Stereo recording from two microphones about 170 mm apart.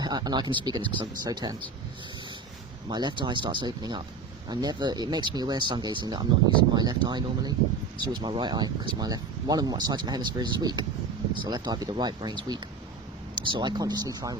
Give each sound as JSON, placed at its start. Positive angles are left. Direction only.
{"t": 0.0, "sound": "speech", "side_deg": -25}
{"t": 2.9, "sound": "speech", "side_deg": -25}